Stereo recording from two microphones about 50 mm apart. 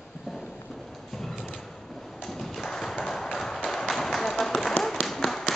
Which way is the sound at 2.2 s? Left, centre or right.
Centre.